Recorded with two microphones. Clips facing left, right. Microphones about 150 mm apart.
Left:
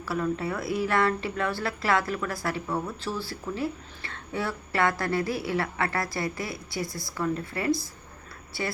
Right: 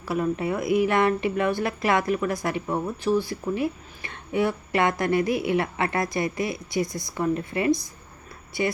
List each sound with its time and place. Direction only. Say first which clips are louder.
0.0 s a woman's voice: right 3 dB; 20° right (ahead or behind)